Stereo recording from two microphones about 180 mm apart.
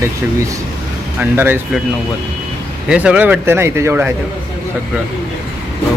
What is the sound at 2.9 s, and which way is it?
Speech, 5° right (ahead or behind).